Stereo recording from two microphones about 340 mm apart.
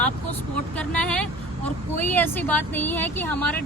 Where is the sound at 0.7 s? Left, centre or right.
Centre.